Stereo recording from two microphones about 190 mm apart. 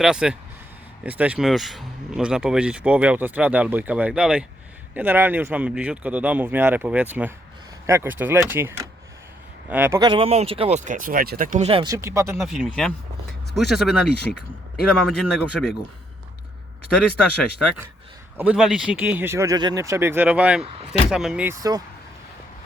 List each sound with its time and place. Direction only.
0.0 s speech: 5° right (ahead or behind)
10.0 s speech: 30° right (ahead or behind); by 11.7 s 45° right (ahead or behind)
11.7 s speech: 25° right (ahead or behind)
12.4 s speech: centre (ahead or behind)
18.3 s speech: 5° right (ahead or behind)